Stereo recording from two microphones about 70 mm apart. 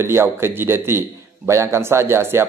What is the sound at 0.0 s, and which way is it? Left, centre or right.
A man's voice, right.